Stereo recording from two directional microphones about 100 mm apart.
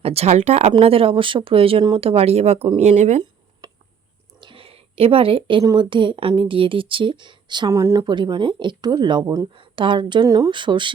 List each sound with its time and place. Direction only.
0.0 s speech: 90° right
0.8 s speech: 70° right (ahead or behind); by 3.2 s 90° right
3.6 s a sound: 40° right (ahead or behind)
4.4 s a sound: 60° right (ahead or behind)
5.7 s speech: 55° right (ahead or behind)
7.7 s speech: 30° right (ahead or behind)
8.0 s speech: 50° right (ahead or behind)
10.2 s speech: 35° right (ahead or behind)
10.5 s speech: 50° right (ahead or behind)